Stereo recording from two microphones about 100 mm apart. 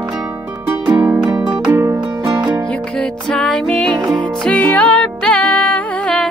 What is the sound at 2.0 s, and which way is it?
Music, 45° right (ahead or behind).